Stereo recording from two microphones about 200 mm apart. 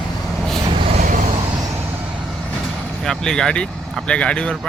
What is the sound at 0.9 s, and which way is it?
Vehicle, 35° right (ahead or behind).